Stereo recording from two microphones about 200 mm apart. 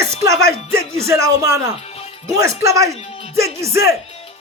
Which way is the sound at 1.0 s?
15° right (ahead or behind).